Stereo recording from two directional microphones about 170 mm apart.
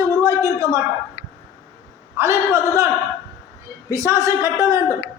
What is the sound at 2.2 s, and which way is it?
Speech, 15° right (ahead or behind).